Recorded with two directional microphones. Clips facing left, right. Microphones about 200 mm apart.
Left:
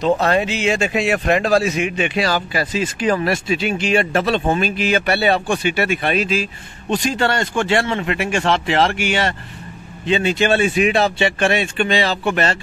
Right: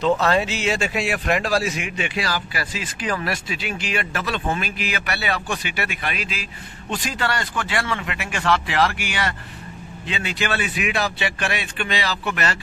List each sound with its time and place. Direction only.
0.3 s a man's voice: 15° left (ahead or behind)